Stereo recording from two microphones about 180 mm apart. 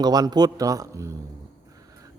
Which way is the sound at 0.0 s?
20° right (ahead or behind).